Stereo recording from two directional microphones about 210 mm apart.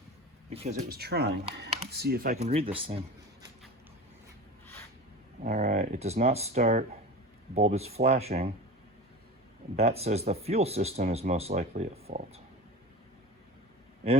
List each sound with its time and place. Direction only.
0.5 s speech: 30° right (ahead or behind)
2.4 s speech: 30° right (ahead or behind)
5.4 s speech: 35° right (ahead or behind)
9.7 s speech: 30° right (ahead or behind)